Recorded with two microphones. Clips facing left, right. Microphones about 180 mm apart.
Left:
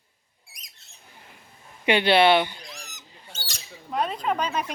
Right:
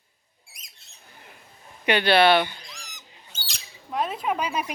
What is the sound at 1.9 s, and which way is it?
Speech, 25° left (ahead or behind).